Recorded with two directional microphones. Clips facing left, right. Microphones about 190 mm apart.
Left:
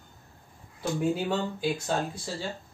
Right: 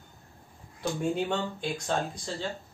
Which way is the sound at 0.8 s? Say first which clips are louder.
Left 1 dB; 5° left (ahead or behind).